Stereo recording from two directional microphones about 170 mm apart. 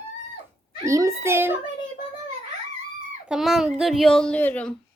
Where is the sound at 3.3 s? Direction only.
Centre (ahead or behind).